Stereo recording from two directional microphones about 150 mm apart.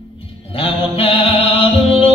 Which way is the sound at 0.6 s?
40° left (ahead or behind).